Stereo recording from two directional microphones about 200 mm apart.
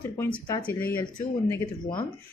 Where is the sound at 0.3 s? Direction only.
25° left (ahead or behind).